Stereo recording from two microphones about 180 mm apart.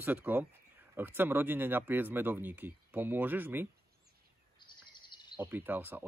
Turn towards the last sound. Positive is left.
turn(degrees=-10)  # may be behind; listen again after turning